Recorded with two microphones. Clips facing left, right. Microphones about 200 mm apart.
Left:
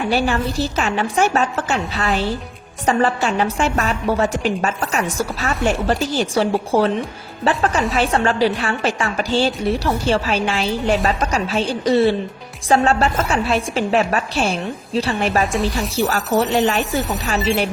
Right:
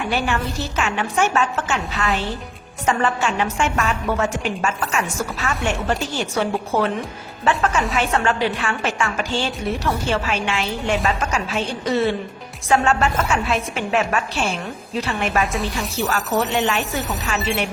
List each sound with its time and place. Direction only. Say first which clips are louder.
0.1 s a woman's voice: left 4 dB; 35° left (ahead or behind)